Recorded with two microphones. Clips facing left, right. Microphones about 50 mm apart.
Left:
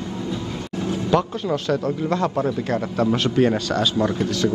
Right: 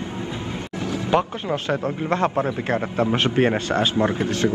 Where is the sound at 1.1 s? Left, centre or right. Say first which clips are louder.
Even; right.